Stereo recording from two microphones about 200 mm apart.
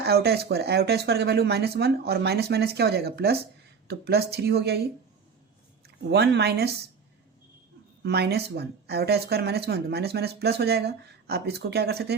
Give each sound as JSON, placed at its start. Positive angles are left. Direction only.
{"t": 0.0, "sound": "speech", "side_deg": -55}
{"t": 6.1, "sound": "speech", "side_deg": -60}
{"t": 8.0, "sound": "speech", "side_deg": -55}